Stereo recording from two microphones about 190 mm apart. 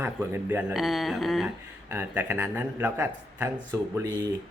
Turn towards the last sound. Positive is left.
turn(degrees=-20)  # may be behind; listen again after turning